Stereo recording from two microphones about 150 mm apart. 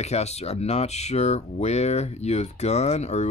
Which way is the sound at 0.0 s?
45° left (ahead or behind).